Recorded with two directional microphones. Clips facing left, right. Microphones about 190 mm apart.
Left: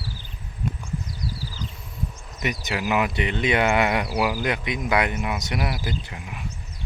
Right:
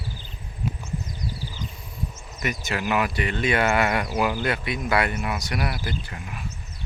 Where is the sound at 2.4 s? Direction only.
15° left (ahead or behind).